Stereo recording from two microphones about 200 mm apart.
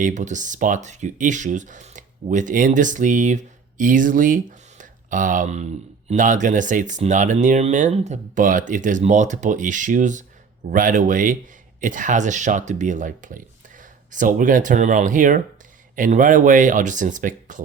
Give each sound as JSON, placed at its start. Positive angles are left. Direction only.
{"t": 0.0, "sound": "speech", "side_deg": -40}